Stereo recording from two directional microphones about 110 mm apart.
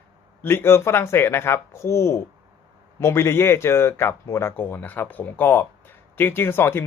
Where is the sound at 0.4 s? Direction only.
20° left (ahead or behind).